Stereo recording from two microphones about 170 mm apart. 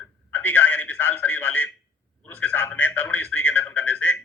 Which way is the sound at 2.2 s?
10° left (ahead or behind).